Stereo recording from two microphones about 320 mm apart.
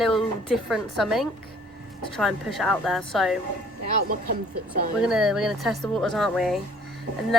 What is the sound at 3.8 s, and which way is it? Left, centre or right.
Speech, right.